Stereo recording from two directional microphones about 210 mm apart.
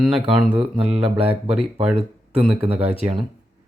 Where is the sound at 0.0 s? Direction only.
Centre (ahead or behind).